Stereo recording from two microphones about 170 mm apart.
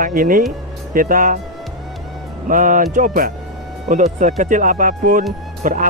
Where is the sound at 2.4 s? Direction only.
50° right (ahead or behind).